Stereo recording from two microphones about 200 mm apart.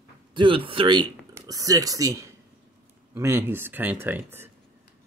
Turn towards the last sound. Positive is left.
turn(degrees=-10)  # may be behind; listen again after turning